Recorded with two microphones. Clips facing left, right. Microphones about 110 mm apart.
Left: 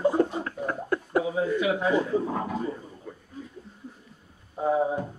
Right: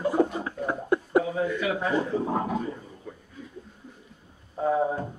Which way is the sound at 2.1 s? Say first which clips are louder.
Even; 20° right (ahead or behind).